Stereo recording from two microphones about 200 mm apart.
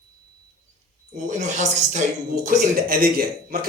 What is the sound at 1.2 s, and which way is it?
Speech, 35° right (ahead or behind).